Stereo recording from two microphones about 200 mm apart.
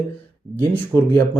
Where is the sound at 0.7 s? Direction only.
10° left (ahead or behind).